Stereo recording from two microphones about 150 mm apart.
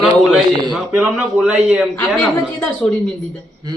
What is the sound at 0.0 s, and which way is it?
A man's voice, centre (ahead or behind).